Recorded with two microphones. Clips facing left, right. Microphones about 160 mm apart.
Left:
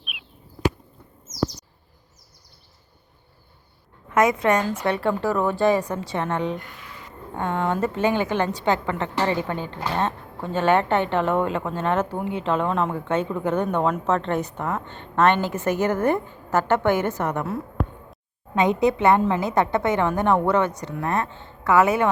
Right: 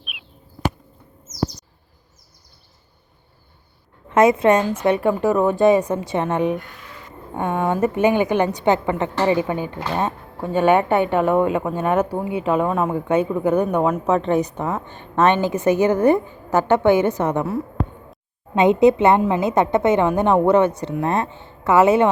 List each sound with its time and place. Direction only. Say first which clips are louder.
0.0 s a sound: right 1 dB; centre (ahead or behind)
4.1 s speech: right 5 dB; 25° right (ahead or behind)
18.5 s speech: right 6 dB; 25° right (ahead or behind)